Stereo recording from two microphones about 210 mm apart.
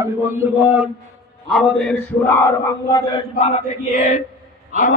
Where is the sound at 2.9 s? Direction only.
20° left (ahead or behind).